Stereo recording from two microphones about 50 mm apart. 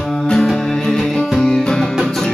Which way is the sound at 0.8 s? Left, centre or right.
Centre.